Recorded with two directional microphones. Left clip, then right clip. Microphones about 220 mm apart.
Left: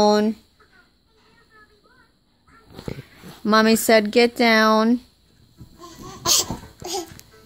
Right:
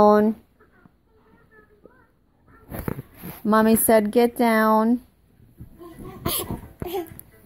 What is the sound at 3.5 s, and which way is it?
Speech, centre (ahead or behind).